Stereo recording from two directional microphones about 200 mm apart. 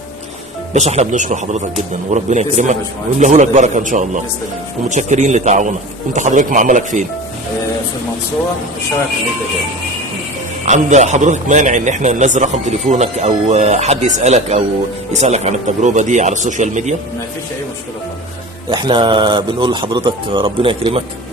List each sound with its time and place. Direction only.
0.7 s a man's voice: 35° right (ahead or behind)
10.7 s a man's voice: 35° right (ahead or behind)
18.7 s a man's voice: 20° right (ahead or behind)